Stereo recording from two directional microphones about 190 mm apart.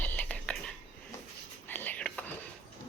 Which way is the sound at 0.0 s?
10° left (ahead or behind).